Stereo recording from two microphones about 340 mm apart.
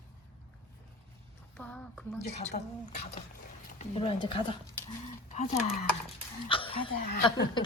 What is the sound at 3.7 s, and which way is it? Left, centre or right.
Speech, centre.